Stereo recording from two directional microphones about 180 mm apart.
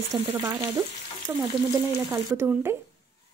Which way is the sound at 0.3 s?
15° right (ahead or behind).